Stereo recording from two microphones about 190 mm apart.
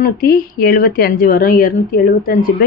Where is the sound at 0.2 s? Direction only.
50° left (ahead or behind).